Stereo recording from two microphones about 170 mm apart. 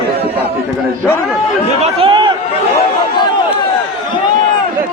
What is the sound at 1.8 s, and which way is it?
Speech, 35° right (ahead or behind).